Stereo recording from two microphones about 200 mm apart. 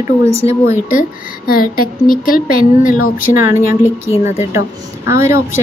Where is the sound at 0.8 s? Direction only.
45° left (ahead or behind).